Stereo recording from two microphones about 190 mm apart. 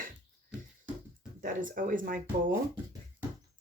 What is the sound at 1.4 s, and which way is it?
Speech, 45° right (ahead or behind).